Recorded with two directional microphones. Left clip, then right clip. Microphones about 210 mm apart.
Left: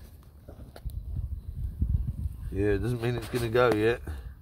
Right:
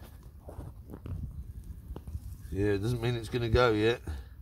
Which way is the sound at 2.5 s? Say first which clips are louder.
Left 2 dB; 15° left (ahead or behind).